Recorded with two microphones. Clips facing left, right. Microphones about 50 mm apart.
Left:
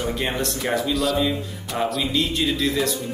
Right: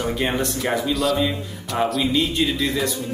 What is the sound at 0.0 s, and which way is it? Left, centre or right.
Speech, centre.